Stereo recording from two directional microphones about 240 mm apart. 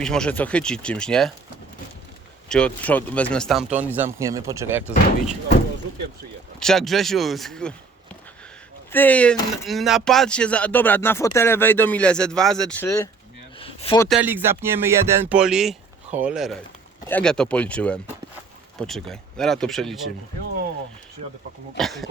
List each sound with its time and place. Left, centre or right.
0.0 s speech: centre
2.5 s speech: centre
6.6 s speech: centre
8.9 s speech: centre
13.6 s a sound: left
14.1 s speech: centre
21.8 s speech: centre